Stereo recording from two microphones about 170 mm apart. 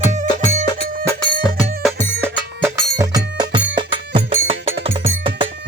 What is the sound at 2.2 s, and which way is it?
Music, 15° right (ahead or behind).